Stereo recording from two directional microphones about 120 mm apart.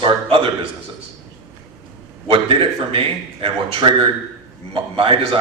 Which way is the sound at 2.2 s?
45° right (ahead or behind).